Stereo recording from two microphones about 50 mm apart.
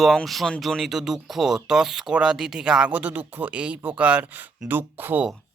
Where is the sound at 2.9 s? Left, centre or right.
Right.